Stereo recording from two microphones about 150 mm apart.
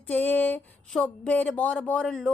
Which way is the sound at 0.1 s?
10° left (ahead or behind).